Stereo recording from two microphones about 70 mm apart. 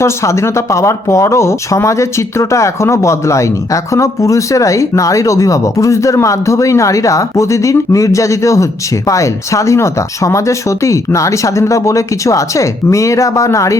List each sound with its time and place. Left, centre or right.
0.0 s speech: left